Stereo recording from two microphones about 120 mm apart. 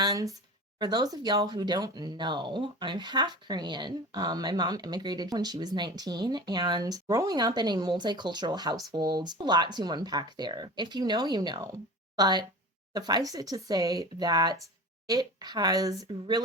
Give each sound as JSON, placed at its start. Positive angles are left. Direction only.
{"t": 0.0, "sound": "speech", "side_deg": -30}